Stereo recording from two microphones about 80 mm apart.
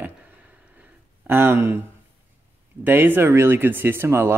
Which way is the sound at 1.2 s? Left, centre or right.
Right.